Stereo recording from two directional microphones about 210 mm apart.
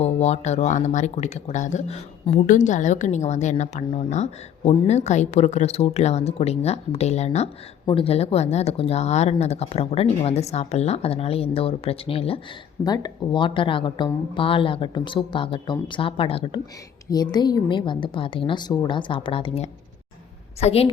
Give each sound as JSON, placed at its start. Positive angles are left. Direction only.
{"t": 0.0, "sound": "speech", "side_deg": 30}